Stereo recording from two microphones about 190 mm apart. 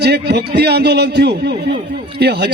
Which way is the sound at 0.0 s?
60° right (ahead or behind).